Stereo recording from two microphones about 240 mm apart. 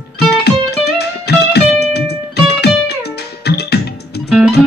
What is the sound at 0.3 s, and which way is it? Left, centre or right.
Music, left.